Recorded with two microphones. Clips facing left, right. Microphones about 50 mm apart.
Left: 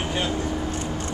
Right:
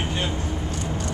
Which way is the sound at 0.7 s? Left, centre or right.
Left.